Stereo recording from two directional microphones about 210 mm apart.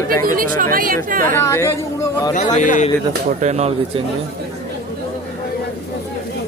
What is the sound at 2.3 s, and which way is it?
Speech, 35° left (ahead or behind).